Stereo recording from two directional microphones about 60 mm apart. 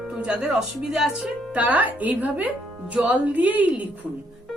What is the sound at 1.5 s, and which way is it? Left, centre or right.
A woman's voice, right.